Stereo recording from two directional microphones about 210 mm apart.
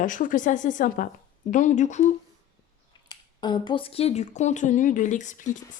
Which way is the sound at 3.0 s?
20° left (ahead or behind).